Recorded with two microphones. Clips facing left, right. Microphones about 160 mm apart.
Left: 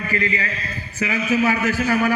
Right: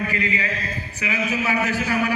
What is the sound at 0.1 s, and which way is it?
A man's voice, 40° left (ahead or behind).